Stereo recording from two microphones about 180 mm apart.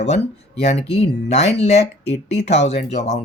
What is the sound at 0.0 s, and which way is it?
Speech, 70° left (ahead or behind).